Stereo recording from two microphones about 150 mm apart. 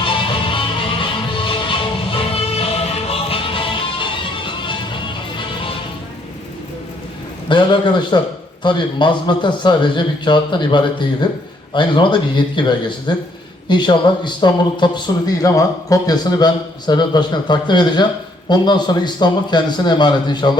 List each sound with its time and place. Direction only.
0.0 s music: 35° left (ahead or behind)
7.4 s a man's voice: 30° left (ahead or behind)